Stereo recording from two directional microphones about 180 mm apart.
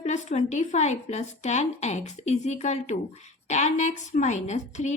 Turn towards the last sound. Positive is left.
turn(degrees=40)  # may be behind; listen again after turning